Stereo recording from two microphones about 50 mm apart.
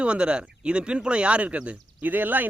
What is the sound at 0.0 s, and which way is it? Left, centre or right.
Speech, right.